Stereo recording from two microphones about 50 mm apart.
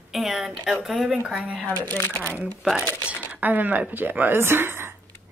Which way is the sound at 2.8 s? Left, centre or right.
Left.